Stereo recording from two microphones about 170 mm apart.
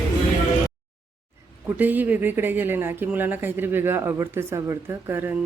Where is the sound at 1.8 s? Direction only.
10° right (ahead or behind).